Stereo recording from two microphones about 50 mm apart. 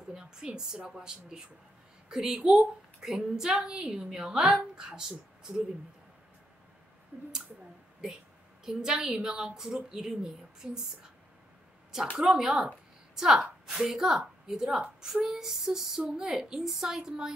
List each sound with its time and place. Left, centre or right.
0.1 s a woman's voice: centre
8.6 s a woman's voice: centre
12.2 s a woman's voice: centre